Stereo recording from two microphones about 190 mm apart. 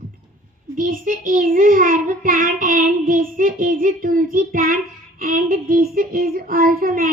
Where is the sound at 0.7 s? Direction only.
45° right (ahead or behind).